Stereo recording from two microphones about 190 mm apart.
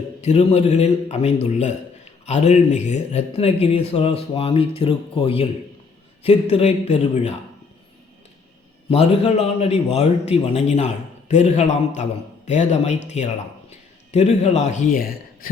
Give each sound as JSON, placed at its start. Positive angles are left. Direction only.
{"t": 0.2, "sound": "a man's voice", "side_deg": 35}
{"t": 8.9, "sound": "a man's voice", "side_deg": 30}